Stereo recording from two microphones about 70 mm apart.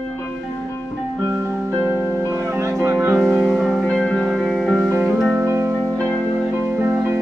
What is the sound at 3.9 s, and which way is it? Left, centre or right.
Music, centre.